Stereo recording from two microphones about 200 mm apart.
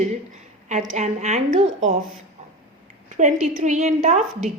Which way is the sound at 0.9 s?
35° right (ahead or behind).